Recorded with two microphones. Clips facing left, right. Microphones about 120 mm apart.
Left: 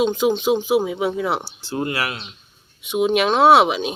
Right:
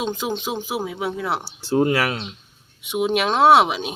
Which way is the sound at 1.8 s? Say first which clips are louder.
Right 4 dB; 45° right (ahead or behind).